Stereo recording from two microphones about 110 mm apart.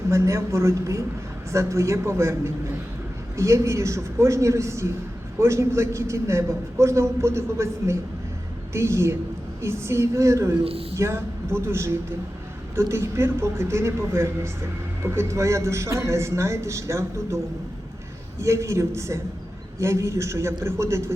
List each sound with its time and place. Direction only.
0.1 s a man's voice: 25° right (ahead or behind)
10.6 s a man's voice: 60° right (ahead or behind)
10.9 s a man's voice: 25° right (ahead or behind)